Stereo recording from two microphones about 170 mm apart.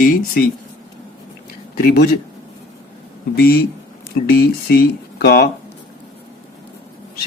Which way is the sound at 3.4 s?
60° left (ahead or behind).